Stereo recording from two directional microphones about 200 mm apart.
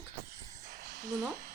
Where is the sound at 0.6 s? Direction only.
40° right (ahead or behind).